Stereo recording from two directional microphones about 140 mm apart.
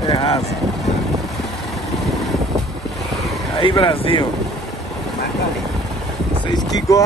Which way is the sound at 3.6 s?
40° left (ahead or behind).